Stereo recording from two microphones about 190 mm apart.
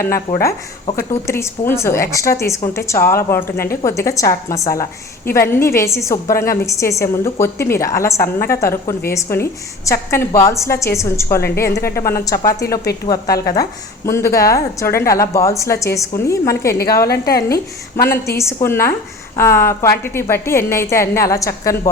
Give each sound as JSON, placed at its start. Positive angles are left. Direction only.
{"t": 0.3, "sound": "a woman's voice", "side_deg": 15}
{"t": 17.1, "sound": "a woman's voice", "side_deg": 55}
{"t": 17.5, "sound": "a woman's voice", "side_deg": 15}